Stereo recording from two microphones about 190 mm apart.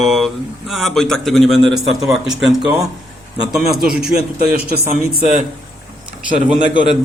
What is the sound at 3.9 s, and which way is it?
Speech, 55° right (ahead or behind).